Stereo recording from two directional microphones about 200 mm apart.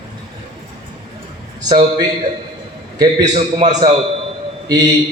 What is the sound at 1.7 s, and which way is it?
Speech, 20° right (ahead or behind).